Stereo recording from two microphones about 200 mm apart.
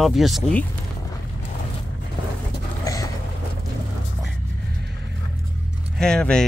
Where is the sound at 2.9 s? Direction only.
15° left (ahead or behind).